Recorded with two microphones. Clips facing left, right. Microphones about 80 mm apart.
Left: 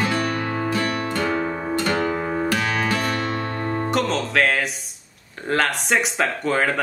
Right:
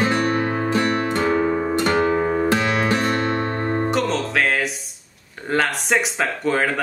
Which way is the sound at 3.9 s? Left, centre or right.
Centre.